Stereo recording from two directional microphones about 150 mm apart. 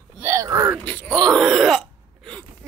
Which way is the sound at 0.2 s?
20° right (ahead or behind).